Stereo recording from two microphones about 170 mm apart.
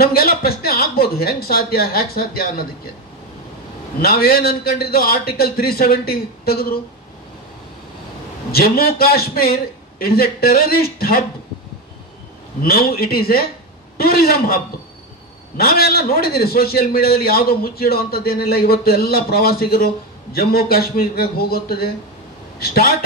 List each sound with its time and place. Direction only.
0.0 s a man's voice: 60° left (ahead or behind)
4.0 s a man's voice: 65° left (ahead or behind)
8.5 s a man's voice: 65° left (ahead or behind)
12.6 s a man's voice: 65° left (ahead or behind)